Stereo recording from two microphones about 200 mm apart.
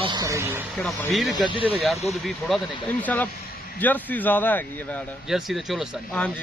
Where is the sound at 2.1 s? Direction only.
Centre (ahead or behind).